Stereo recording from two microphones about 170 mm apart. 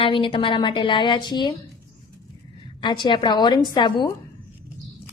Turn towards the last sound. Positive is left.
turn(degrees=25)  # may be behind; listen again after turning